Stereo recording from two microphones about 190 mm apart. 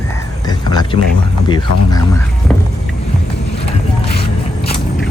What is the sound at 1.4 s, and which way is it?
Speech, 20° left (ahead or behind).